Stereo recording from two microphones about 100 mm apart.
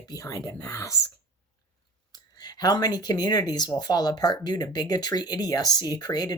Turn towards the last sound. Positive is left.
turn(degrees=40)  # may be behind; listen again after turning